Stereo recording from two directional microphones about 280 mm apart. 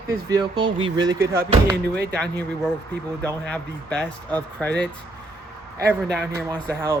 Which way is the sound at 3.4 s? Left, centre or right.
Centre.